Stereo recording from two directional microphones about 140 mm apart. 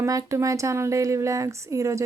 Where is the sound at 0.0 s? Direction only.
25° right (ahead or behind).